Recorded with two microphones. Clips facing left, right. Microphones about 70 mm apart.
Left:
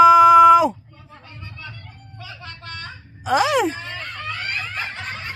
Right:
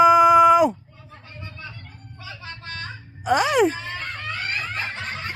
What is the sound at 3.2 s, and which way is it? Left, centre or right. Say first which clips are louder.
Speech: even; centre.